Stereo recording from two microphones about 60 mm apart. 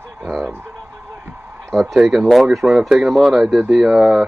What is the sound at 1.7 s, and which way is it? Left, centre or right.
Speech, centre.